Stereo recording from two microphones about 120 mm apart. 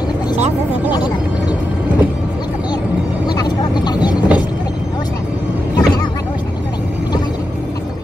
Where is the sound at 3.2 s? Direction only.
35° left (ahead or behind).